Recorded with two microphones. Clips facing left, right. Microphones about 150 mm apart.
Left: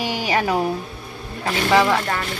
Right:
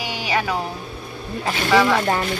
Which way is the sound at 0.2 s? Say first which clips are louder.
Left 1 dB; 45° left (ahead or behind).